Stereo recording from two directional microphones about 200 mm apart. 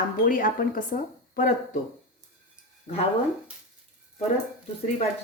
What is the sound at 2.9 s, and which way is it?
Speech, 35° left (ahead or behind).